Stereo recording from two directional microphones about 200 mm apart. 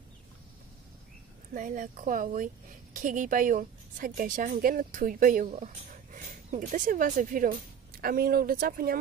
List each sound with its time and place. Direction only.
1.5 s a woman's voice: 40° right (ahead or behind)